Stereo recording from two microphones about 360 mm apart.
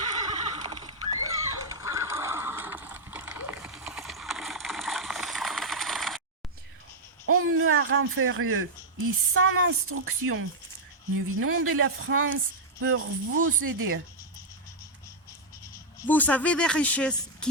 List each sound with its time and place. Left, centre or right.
0.0 s neigh: centre
7.3 s a sound: right
9.3 s speech: right
16.0 s speech: centre